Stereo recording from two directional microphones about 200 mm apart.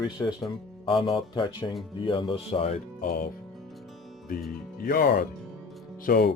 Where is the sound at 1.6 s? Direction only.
10° left (ahead or behind).